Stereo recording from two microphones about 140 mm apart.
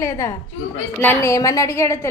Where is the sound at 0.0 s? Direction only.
20° left (ahead or behind).